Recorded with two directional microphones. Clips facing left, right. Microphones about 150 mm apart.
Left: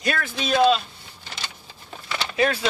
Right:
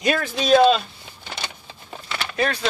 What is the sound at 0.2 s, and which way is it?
Speech, 40° right (ahead or behind).